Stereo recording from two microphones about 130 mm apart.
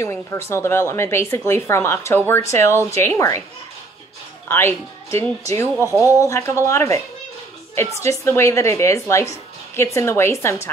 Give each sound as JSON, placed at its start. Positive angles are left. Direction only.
{"t": 0.0, "sound": "speech", "side_deg": 20}
{"t": 4.5, "sound": "speech", "side_deg": 20}
{"t": 5.8, "sound": "speech", "side_deg": -20}
{"t": 6.1, "sound": "speech", "side_deg": 25}